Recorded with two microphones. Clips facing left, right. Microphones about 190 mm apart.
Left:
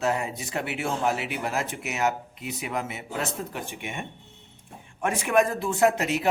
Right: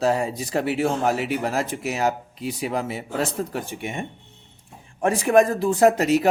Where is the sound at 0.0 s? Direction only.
35° right (ahead or behind).